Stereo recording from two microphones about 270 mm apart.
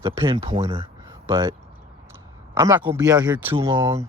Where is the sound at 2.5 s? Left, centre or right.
Centre.